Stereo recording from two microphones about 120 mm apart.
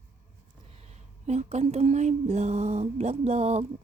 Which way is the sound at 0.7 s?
70° right (ahead or behind).